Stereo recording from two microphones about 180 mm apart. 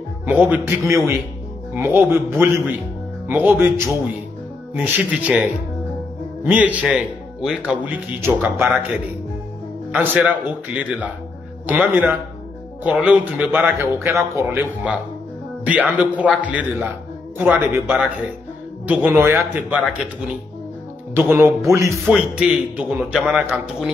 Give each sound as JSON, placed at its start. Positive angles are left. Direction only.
{"t": 0.3, "sound": "speech", "side_deg": -10}
{"t": 9.9, "sound": "speech", "side_deg": -10}
{"t": 21.1, "sound": "speech", "side_deg": -10}
{"t": 22.0, "sound": "speech", "side_deg": -5}